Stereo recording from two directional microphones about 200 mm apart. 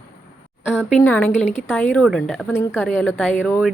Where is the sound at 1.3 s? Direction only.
35° left (ahead or behind).